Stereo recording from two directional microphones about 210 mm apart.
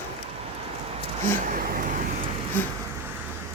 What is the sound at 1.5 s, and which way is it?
Vehicle, 40° right (ahead or behind).